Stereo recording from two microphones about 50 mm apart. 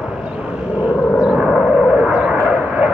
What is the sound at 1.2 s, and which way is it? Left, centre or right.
Vehicle, right.